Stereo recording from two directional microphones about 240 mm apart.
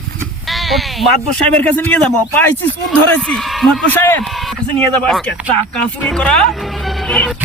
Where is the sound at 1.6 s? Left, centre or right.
Centre.